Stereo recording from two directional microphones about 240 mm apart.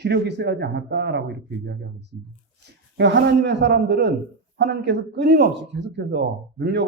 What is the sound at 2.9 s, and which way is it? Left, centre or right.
Speech, right.